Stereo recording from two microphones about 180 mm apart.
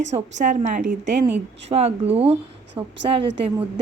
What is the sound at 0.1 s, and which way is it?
Speech, 40° right (ahead or behind).